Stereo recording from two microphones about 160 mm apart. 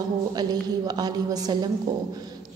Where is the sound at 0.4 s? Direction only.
25° right (ahead or behind).